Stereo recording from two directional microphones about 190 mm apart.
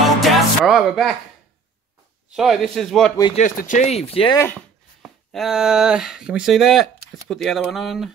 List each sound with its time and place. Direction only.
0.2 s music: centre (ahead or behind)
2.3 s speech: centre (ahead or behind)
3.3 s speech: 45° left (ahead or behind)
5.0 s speech: centre (ahead or behind)